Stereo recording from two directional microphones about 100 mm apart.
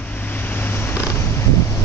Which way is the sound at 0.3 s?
20° left (ahead or behind).